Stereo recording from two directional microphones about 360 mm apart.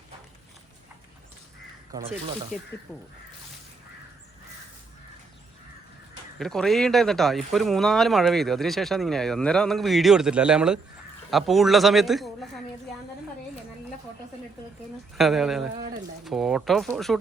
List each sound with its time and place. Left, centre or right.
2.0 s speech: centre
2.9 s speech: centre
6.4 s speech: centre
15.2 s speech: centre
15.7 s speech: centre
16.2 s speech: centre